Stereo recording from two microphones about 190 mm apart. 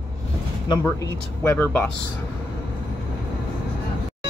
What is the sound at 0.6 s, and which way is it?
Speech, 20° left (ahead or behind).